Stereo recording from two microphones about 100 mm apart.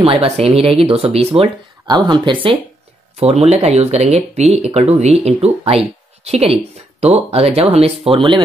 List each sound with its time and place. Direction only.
0.0 s speech: 65° right (ahead or behind)
1.9 s speech: 50° right (ahead or behind)
3.2 s speech: 90° right; by 8.4 s 70° right (ahead or behind)